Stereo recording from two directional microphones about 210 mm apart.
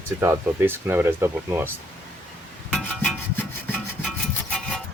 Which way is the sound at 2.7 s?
5° left (ahead or behind).